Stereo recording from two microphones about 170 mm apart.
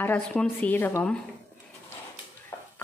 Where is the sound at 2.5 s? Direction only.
15° left (ahead or behind).